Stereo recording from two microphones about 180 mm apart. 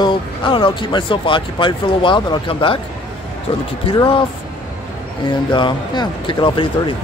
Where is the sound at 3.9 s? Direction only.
25° left (ahead or behind).